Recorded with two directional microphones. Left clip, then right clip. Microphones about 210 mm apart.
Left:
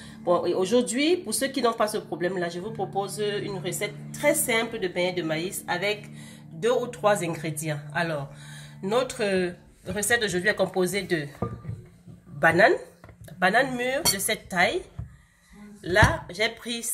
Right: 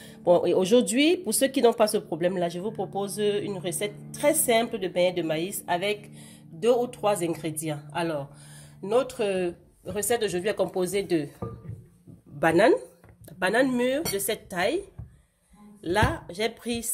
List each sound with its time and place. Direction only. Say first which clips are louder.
0.2 s speech: right 3 dB; 45° right (ahead or behind)
12.4 s speech: left 1 dB; 50° right (ahead or behind)
15.8 s speech: left 4 dB; 50° right (ahead or behind)